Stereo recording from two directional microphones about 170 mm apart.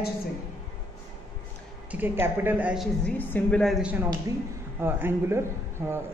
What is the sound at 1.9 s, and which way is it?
Speech, 10° right (ahead or behind).